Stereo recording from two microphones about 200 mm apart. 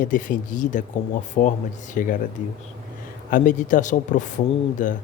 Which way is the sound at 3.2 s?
40° left (ahead or behind).